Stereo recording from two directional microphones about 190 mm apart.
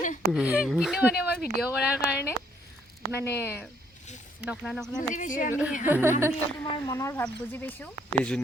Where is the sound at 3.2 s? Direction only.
10° left (ahead or behind).